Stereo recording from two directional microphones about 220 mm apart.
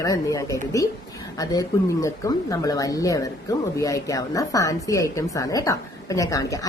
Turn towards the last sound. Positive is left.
turn(degrees=15)  # may be behind; listen again after turning